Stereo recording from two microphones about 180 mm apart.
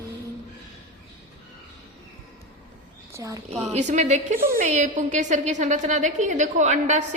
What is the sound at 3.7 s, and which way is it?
A woman's voice, 40° right (ahead or behind).